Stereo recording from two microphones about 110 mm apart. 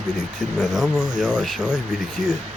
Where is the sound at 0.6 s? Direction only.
5° right (ahead or behind).